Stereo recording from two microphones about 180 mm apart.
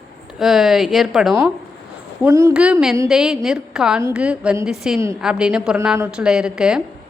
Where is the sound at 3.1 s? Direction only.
5° right (ahead or behind).